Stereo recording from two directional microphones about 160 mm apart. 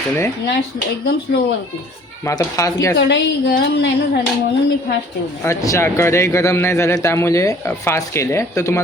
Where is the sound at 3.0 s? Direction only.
90° left.